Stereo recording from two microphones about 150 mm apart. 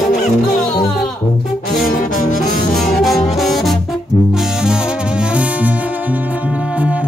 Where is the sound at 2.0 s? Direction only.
60° left (ahead or behind).